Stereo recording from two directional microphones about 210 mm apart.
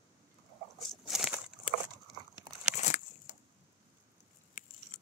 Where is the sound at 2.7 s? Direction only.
35° left (ahead or behind).